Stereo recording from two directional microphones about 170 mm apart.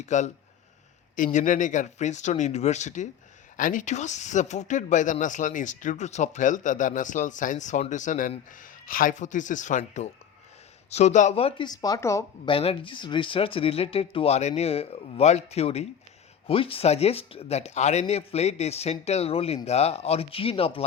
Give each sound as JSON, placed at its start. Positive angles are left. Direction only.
{"t": 0.0, "sound": "speech", "side_deg": 45}
{"t": 12.5, "sound": "speech", "side_deg": 30}